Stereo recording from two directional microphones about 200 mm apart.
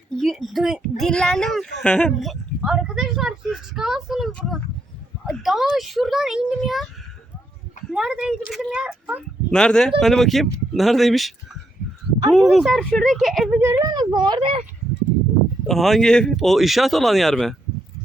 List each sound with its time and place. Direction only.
0.2 s speech: centre (ahead or behind)
7.9 s speech: 5° right (ahead or behind)
13.6 s speech: 15° right (ahead or behind)
15.6 s speech: centre (ahead or behind)